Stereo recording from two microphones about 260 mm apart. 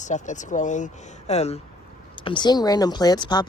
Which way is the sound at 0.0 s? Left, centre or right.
Left.